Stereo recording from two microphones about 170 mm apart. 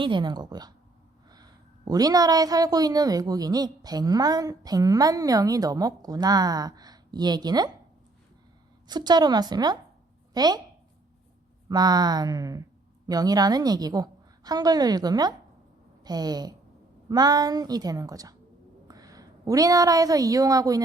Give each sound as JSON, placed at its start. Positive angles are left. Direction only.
{"t": 0.0, "sound": "a woman's voice", "side_deg": -25}
{"t": 8.9, "sound": "a woman's voice", "side_deg": -25}
{"t": 11.7, "sound": "a woman's voice", "side_deg": -25}